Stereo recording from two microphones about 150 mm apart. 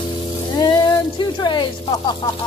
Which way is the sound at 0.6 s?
30° left (ahead or behind).